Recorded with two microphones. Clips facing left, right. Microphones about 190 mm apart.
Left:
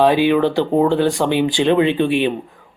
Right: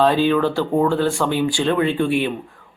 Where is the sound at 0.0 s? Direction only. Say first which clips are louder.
Left 3 dB; 15° left (ahead or behind).